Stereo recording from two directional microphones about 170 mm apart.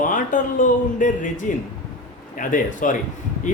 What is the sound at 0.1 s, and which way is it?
Speech, 50° left (ahead or behind).